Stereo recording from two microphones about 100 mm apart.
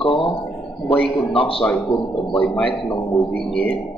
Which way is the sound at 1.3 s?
65° left (ahead or behind).